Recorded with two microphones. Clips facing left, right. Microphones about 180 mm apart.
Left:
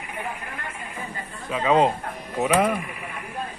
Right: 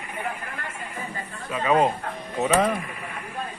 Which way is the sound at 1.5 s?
20° left (ahead or behind).